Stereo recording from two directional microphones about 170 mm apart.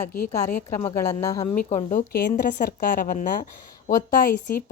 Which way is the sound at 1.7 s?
50° left (ahead or behind).